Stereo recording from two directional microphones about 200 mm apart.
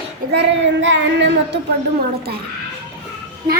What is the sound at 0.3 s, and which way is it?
Speech, 65° right (ahead or behind).